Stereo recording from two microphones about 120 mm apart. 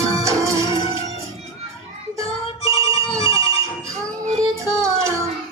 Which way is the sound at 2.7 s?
50° left (ahead or behind).